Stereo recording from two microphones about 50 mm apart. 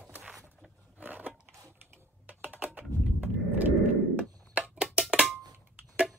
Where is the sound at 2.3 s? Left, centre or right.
Right.